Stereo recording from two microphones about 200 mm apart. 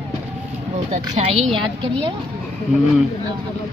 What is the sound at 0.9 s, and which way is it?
A woman's voice, 35° right (ahead or behind).